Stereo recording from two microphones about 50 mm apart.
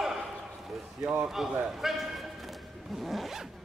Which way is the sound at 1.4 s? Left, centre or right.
Centre.